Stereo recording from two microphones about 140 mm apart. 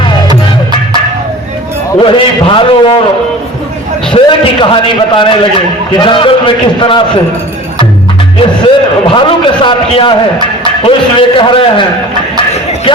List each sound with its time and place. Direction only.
2.0 s a man's voice: 40° left (ahead or behind)
4.1 s a man's voice: 40° left (ahead or behind)
8.4 s a man's voice: 40° left (ahead or behind)
11.3 s a man's voice: 35° left (ahead or behind)